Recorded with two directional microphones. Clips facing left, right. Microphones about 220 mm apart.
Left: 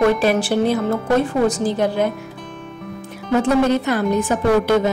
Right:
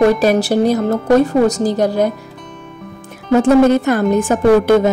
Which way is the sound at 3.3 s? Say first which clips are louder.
Right 6 dB; 45° right (ahead or behind).